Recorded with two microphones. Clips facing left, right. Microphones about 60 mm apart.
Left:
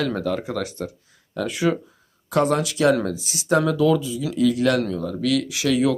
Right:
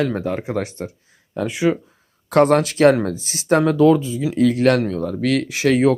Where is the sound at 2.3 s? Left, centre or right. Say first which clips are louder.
Right 6 dB; right.